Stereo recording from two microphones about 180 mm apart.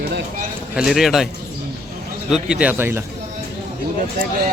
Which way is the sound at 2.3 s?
5° right (ahead or behind).